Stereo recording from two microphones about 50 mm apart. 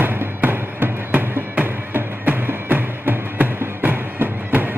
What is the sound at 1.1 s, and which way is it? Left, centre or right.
Music, right.